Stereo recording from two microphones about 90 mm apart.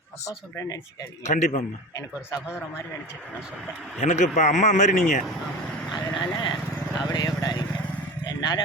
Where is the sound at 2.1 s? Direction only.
10° right (ahead or behind).